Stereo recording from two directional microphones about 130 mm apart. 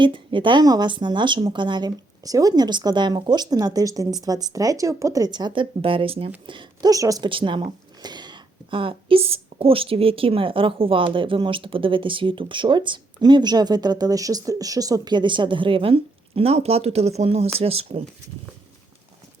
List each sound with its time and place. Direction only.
0.0 s speech: 40° right (ahead or behind)
6.9 s a woman's voice: 25° right (ahead or behind)
7.3 s speech: 40° right (ahead or behind)